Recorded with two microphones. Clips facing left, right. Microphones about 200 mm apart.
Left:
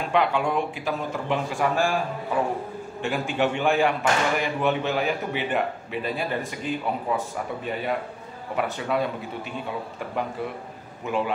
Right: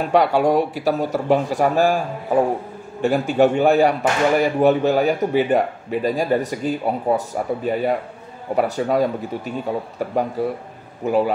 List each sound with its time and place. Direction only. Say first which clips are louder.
0.0 s speech: right 7 dB; 40° right (ahead or behind)